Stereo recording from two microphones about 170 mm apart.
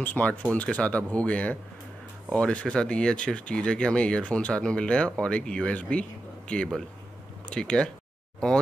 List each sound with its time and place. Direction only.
0.0 s speech: 10° left (ahead or behind)